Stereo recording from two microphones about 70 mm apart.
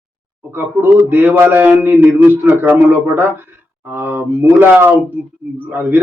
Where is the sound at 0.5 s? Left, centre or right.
Right.